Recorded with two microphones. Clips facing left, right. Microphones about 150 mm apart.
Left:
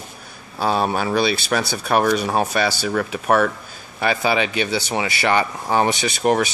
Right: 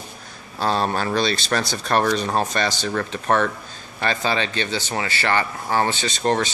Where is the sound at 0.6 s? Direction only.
5° left (ahead or behind).